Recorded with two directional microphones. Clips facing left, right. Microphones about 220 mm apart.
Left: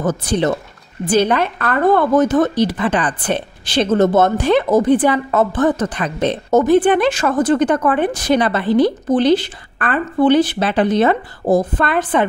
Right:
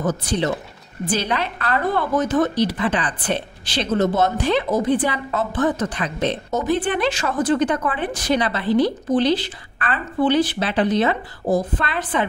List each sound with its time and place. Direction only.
0.0 s a woman's voice: 50° left (ahead or behind)